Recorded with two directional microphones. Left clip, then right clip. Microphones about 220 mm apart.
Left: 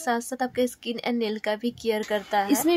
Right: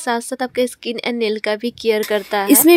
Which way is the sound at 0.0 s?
15° right (ahead or behind).